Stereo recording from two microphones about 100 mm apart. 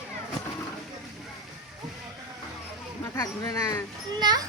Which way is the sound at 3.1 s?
30° left (ahead or behind).